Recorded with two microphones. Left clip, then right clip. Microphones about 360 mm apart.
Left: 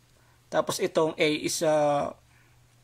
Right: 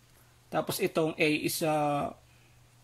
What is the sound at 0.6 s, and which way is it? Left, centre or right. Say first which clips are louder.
Speech: left 4 dB; centre.